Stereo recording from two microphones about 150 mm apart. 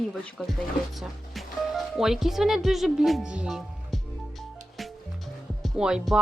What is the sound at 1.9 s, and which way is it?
Speech, 5° right (ahead or behind).